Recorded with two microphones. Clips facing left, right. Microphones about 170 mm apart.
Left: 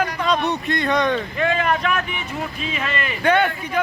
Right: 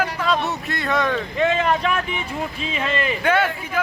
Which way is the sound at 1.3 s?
20° right (ahead or behind).